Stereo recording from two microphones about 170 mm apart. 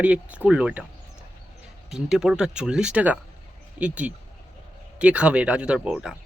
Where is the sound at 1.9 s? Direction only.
Centre (ahead or behind).